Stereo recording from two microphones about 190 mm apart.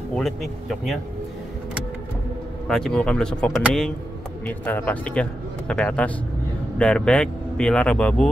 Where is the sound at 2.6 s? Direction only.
Centre (ahead or behind).